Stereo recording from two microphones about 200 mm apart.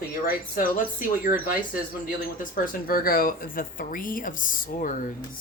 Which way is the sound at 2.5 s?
45° left (ahead or behind).